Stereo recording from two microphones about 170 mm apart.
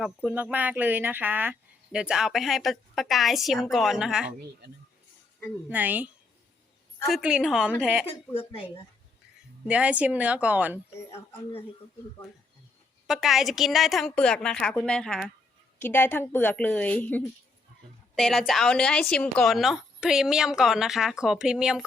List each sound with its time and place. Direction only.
0.0 s a woman's voice: 10° right (ahead or behind)
5.6 s a woman's voice: 10° right (ahead or behind)
7.1 s speech: 5° right (ahead or behind)
8.0 s a woman's voice: 30° left (ahead or behind)
9.6 s a woman's voice: 5° right (ahead or behind)
13.1 s a woman's voice: centre (ahead or behind)